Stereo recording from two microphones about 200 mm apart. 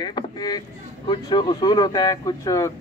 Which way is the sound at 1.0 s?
20° left (ahead or behind).